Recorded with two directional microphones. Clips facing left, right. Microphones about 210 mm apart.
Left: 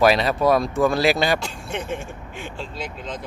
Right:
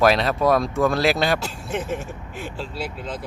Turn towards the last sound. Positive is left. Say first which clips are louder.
# right 1 dB
turn(degrees=-5)  # may be behind; listen again after turning